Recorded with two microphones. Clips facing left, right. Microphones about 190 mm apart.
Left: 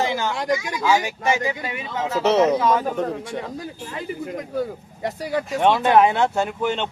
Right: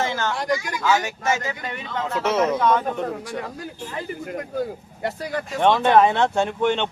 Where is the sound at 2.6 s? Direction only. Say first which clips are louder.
Even; 5° left (ahead or behind).